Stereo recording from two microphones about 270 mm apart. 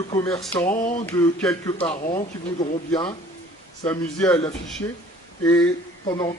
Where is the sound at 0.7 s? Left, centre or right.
Left.